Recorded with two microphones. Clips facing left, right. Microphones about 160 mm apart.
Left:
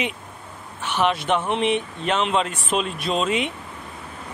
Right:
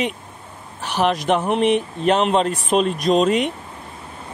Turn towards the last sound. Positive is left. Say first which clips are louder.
# right 6 dB
turn(degrees=-40)  # may be behind; listen again after turning